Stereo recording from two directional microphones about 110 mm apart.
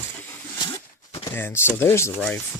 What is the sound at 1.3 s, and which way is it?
Speech, 20° left (ahead or behind).